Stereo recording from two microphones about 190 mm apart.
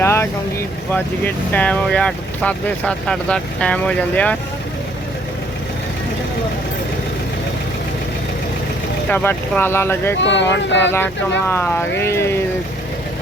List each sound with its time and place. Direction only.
0.0 s vehicle: 15° left (ahead or behind)
0.9 s speech: 10° left (ahead or behind)
9.0 s speech: 10° left (ahead or behind)
10.2 s speech: 70° left (ahead or behind)
10.9 s speech: 10° left (ahead or behind)